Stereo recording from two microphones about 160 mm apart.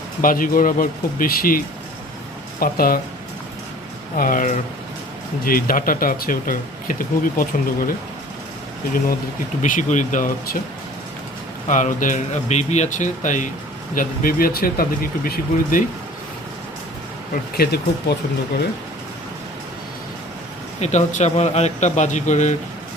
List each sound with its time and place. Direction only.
0.2 s speech: 60° left (ahead or behind)
4.2 s speech: 60° left (ahead or behind)
9.6 s speech: 55° left (ahead or behind)
11.7 s a man's voice: 55° left (ahead or behind)
17.6 s speech: 75° left (ahead or behind)
20.8 s a man's voice: 45° left (ahead or behind)